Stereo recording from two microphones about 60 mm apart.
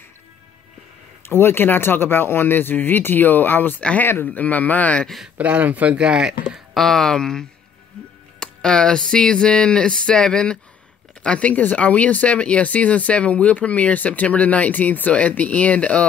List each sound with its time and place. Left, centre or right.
1.2 s speech: left
5.4 s speech: right
6.5 s speech: centre; by 16.1 s left